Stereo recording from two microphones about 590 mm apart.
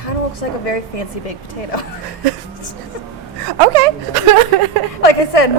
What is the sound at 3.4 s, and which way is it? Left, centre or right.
Speech, right.